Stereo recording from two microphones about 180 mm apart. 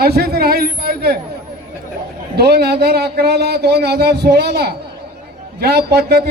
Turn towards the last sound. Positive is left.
turn(degrees=-65)  # may be behind; listen again after turning